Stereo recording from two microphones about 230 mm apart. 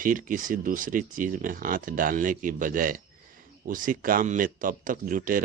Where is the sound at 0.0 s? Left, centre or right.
Right.